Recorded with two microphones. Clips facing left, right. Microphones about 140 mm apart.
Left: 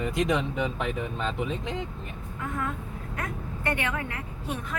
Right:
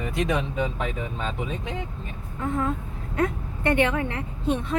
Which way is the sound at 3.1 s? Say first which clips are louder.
Right 10 dB; 25° right (ahead or behind).